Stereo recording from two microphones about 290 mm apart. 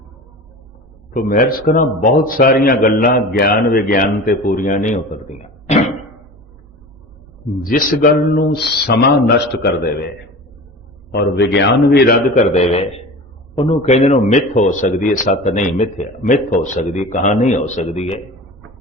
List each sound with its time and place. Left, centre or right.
1.1 s a man's voice: left
7.6 s speech: left
11.1 s a man's voice: left